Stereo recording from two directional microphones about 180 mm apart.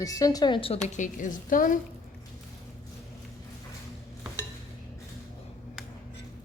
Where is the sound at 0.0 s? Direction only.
20° left (ahead or behind); by 1.8 s 50° left (ahead or behind).